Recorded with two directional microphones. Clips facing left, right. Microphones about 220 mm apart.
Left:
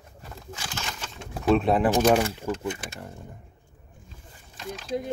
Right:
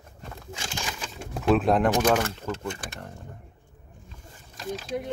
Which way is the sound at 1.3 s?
Centre (ahead or behind).